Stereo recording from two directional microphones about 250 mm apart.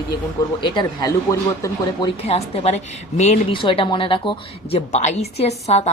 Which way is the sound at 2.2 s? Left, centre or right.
Left.